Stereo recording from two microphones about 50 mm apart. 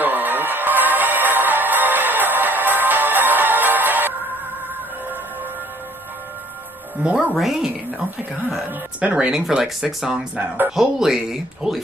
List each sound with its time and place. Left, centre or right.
0.0 s music: right
7.0 s speech: right
7.3 s speech: centre
9.0 s speech: right
9.6 s speech: centre
10.0 s speech: centre